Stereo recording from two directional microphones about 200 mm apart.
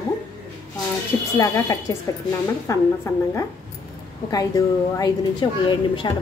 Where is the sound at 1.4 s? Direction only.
15° left (ahead or behind).